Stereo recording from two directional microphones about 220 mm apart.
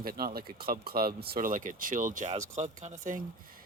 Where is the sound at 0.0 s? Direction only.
40° right (ahead or behind).